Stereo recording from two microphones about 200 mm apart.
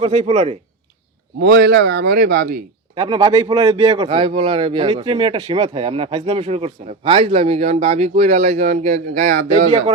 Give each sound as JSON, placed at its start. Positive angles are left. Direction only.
{"t": 0.0, "sound": "speech", "side_deg": -35}
{"t": 1.4, "sound": "speech", "side_deg": -55}
{"t": 2.9, "sound": "speech", "side_deg": -25}